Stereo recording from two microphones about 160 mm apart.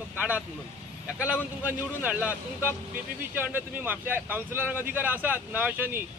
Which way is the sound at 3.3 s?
10° right (ahead or behind).